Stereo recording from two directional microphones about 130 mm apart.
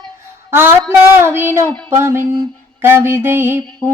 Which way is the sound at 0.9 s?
20° right (ahead or behind).